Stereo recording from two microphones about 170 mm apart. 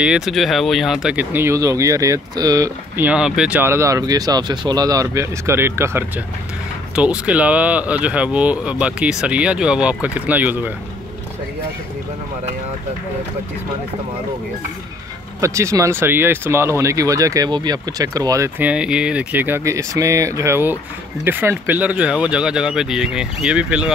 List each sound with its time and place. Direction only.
0.0 s speech: 5° right (ahead or behind); by 3.1 s 20° right (ahead or behind)
3.1 s speech: 5° right (ahead or behind)
15.4 s speech: 15° right (ahead or behind)